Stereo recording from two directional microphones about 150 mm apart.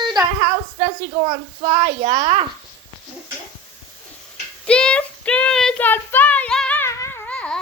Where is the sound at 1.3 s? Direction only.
50° right (ahead or behind).